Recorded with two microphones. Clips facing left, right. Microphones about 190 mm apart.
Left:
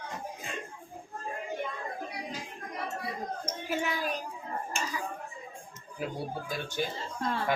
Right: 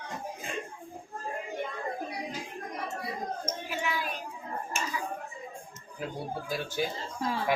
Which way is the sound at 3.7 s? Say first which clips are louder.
Left 4 dB; 45° left (ahead or behind).